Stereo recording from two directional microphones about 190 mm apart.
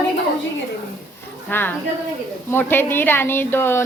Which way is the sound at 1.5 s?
10° left (ahead or behind).